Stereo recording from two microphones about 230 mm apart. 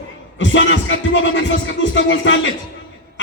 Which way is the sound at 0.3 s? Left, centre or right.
Left.